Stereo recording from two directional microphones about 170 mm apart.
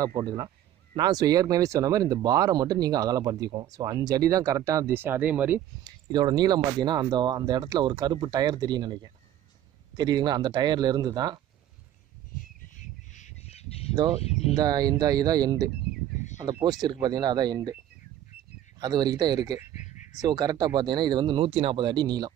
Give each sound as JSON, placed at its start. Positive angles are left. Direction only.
{"t": 0.0, "sound": "speech", "side_deg": -20}
{"t": 5.9, "sound": "speech", "side_deg": -25}
{"t": 12.7, "sound": "squawk", "side_deg": 45}
{"t": 14.2, "sound": "speech", "side_deg": 35}
{"t": 14.6, "sound": "speech", "side_deg": -25}
{"t": 16.8, "sound": "speech", "side_deg": -25}
{"t": 18.8, "sound": "speech", "side_deg": -25}
{"t": 19.6, "sound": "a sound", "side_deg": 45}
{"t": 20.2, "sound": "speech", "side_deg": -25}